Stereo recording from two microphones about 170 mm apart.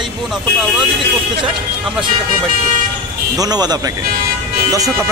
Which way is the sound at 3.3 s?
25° right (ahead or behind).